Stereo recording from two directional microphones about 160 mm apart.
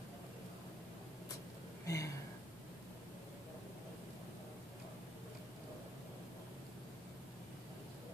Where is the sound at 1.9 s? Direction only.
20° left (ahead or behind).